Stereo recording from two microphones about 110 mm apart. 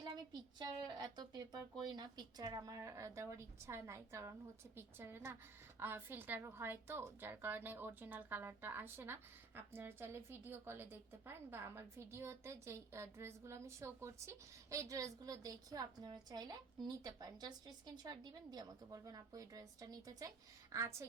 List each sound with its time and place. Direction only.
0.6 s a woman's voice: 40° right (ahead or behind)